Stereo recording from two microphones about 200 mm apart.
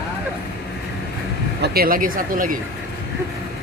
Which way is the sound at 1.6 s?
50° right (ahead or behind).